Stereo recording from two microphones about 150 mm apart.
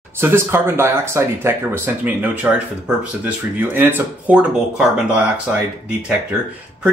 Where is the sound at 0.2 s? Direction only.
15° right (ahead or behind).